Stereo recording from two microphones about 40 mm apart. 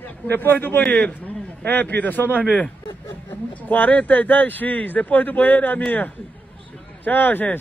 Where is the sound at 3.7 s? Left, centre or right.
Left.